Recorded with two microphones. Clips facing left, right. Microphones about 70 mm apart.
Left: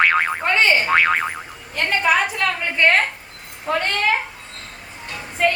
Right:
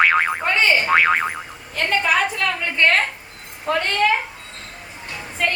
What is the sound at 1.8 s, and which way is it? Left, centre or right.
A woman's voice, centre.